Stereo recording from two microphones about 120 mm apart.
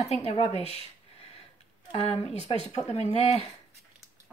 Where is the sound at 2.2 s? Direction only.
55° left (ahead or behind).